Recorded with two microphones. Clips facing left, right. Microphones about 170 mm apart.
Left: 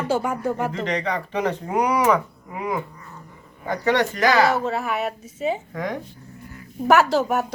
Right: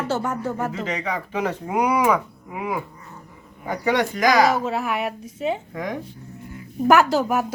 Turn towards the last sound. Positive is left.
turn(degrees=0)  # may be behind; listen again after turning